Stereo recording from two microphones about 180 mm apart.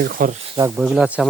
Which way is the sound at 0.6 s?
10° right (ahead or behind).